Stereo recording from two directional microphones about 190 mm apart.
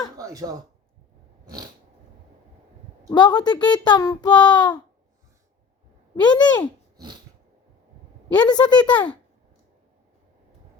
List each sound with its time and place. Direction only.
0.2 s speech: 20° right (ahead or behind)
1.5 s a sound: 20° right (ahead or behind)
3.1 s a child's voice: 20° left (ahead or behind)
6.1 s a child's voice: 20° left (ahead or behind)
6.9 s a sound: 20° right (ahead or behind)
8.3 s a child's voice: 20° left (ahead or behind)